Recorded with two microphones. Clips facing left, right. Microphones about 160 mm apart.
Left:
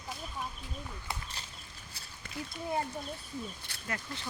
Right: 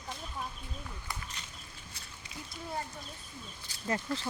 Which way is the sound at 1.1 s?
35° left (ahead or behind).